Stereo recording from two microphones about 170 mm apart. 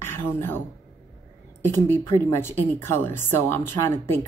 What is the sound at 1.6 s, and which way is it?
Speech, 15° left (ahead or behind).